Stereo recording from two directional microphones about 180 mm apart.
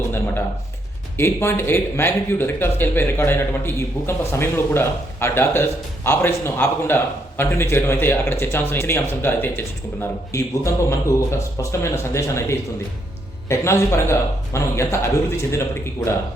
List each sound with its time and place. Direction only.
1.1 s speech: 15° left (ahead or behind)